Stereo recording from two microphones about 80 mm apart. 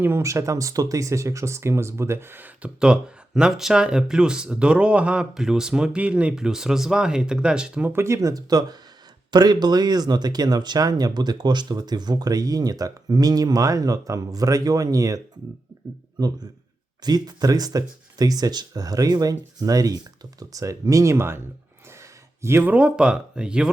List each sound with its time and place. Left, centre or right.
0.0 s speech: right
2.6 s speech: centre
7.9 s a man's voice: right
22.7 s speech: centre